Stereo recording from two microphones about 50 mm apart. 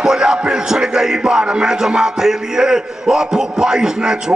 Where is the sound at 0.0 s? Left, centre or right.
Centre.